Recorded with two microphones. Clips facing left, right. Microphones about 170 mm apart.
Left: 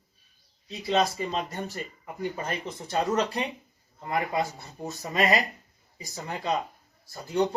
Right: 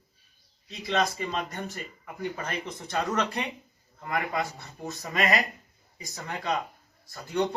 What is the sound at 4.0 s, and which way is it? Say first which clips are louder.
Speech: left 2 dB; 25° left (ahead or behind).